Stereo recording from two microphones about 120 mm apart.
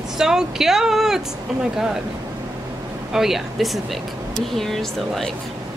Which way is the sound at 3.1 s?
Centre (ahead or behind).